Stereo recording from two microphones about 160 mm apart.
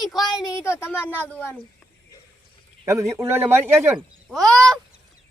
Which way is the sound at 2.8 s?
20° right (ahead or behind).